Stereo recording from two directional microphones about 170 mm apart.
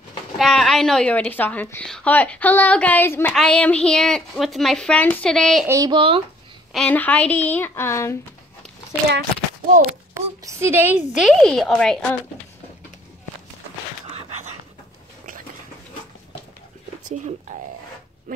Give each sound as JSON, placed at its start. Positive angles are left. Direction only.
{"t": 0.4, "sound": "a woman's voice", "side_deg": 0}
{"t": 5.7, "sound": "speech", "side_deg": -20}
{"t": 6.7, "sound": "a woman's voice", "side_deg": 5}
{"t": 10.1, "sound": "speech", "side_deg": -15}
{"t": 14.1, "sound": "a sound", "side_deg": -40}